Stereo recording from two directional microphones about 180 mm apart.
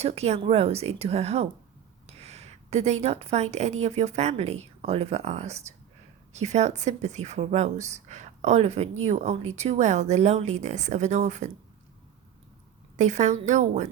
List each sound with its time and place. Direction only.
0.0 s a woman's voice: 35° right (ahead or behind)
13.0 s a woman's voice: 40° right (ahead or behind)